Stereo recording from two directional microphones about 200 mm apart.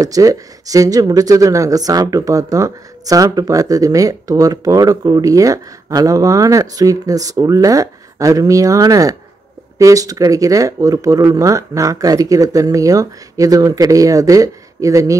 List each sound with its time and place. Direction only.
0.0 s speech: 15° right (ahead or behind)